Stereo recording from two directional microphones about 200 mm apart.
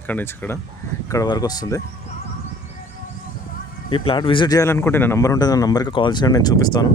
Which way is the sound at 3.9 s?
25° left (ahead or behind).